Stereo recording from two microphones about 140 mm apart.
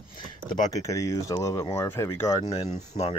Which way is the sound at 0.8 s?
20° left (ahead or behind).